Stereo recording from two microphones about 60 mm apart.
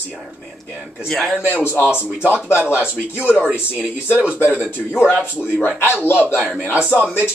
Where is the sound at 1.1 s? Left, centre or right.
Centre.